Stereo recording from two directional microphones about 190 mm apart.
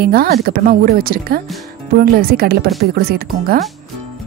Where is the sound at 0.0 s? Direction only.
55° right (ahead or behind).